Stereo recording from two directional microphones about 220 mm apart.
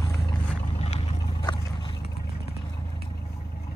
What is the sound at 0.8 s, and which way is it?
Boat, 25° left (ahead or behind).